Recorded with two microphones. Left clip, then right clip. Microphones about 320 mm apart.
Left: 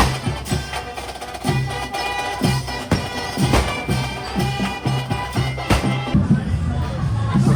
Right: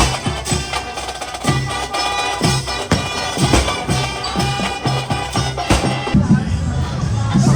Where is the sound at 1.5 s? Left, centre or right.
Right.